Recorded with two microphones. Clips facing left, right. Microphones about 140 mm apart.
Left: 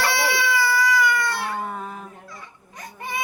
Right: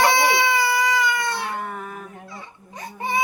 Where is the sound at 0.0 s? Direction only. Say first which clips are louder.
Right 5 dB; 20° right (ahead or behind).